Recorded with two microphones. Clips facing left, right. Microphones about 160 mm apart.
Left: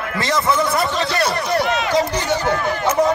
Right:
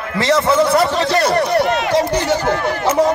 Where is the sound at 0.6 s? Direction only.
75° right (ahead or behind).